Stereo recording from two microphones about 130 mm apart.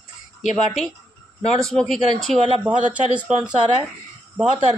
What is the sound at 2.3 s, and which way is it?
Speech, 50° right (ahead or behind).